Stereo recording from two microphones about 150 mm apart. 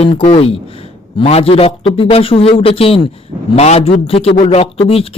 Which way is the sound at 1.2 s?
40° left (ahead or behind).